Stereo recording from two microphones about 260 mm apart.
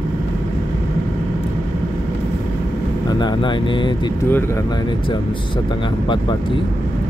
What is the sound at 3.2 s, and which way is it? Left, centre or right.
Speech, centre.